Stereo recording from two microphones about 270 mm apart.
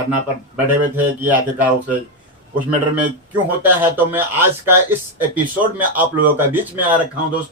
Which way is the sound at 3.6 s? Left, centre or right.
Centre.